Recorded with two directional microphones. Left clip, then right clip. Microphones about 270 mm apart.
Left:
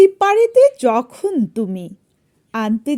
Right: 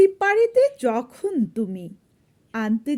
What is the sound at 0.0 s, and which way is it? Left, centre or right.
Speech, left.